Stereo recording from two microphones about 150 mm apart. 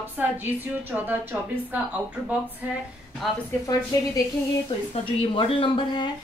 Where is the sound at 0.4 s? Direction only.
10° right (ahead or behind).